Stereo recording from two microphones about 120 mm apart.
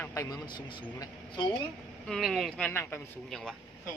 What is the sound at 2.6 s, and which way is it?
Speech, 20° left (ahead or behind).